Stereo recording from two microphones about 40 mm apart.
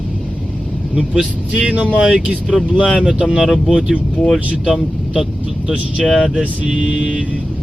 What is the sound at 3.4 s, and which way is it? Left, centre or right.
Speech, centre.